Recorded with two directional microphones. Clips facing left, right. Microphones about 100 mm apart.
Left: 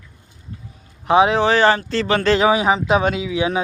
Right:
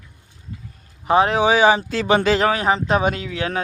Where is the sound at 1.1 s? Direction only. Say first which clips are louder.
Left 2 dB; centre (ahead or behind).